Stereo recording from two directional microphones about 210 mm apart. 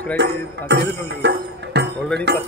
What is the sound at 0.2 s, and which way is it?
Speech, 55° right (ahead or behind).